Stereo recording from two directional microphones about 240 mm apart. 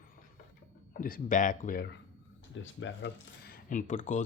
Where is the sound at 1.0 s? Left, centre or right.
Left.